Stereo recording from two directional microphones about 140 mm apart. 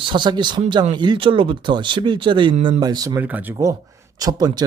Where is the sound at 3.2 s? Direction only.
10° right (ahead or behind).